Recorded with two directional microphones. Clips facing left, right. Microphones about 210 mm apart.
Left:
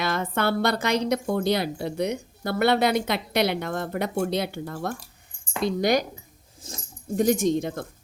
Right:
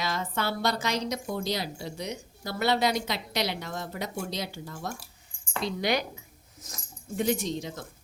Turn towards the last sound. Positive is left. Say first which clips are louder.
# left 9 dB
turn(degrees=55)  # may be behind; listen again after turning